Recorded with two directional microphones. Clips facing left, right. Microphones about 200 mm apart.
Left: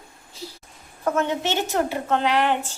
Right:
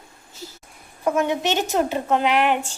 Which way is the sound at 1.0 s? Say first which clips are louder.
Right 2 dB; 15° right (ahead or behind).